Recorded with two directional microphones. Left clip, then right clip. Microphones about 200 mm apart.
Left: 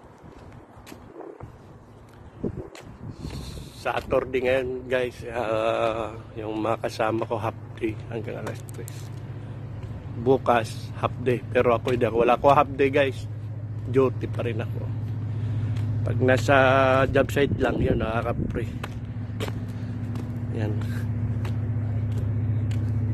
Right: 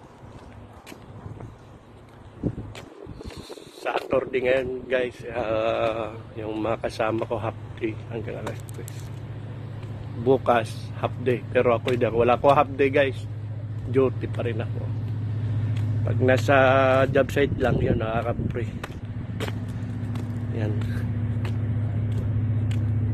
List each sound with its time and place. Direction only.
3.3 s speech: 15° left (ahead or behind)
10.2 s speech: 10° left (ahead or behind)
16.1 s speech: 10° left (ahead or behind)
20.5 s vehicle: 10° left (ahead or behind)